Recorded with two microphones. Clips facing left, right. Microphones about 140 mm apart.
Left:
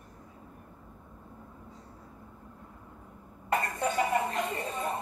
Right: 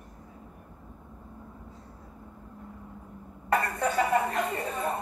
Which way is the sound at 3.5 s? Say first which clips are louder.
Right 3 dB; 35° right (ahead or behind).